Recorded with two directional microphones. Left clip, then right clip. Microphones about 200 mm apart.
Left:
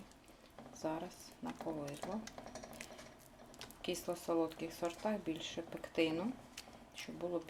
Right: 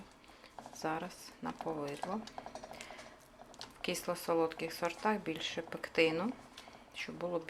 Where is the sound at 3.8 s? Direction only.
5° right (ahead or behind).